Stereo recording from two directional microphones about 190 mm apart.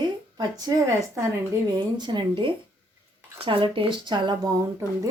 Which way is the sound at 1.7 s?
25° right (ahead or behind).